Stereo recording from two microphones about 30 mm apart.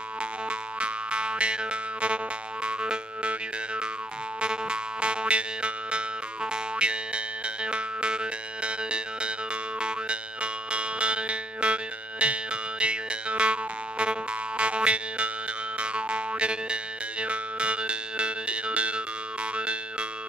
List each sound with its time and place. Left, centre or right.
0.5 s music: right
4.4 s music: right